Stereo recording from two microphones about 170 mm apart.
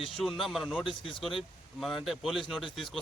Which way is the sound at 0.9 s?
30° left (ahead or behind).